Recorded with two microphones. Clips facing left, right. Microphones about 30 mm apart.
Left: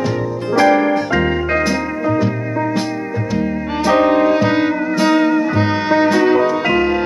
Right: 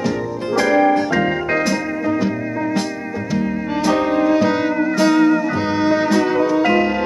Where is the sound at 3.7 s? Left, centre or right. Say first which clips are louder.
Left 4 dB; centre.